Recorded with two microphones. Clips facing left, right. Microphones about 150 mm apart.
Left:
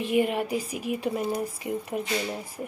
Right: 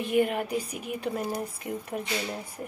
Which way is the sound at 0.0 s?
5° left (ahead or behind).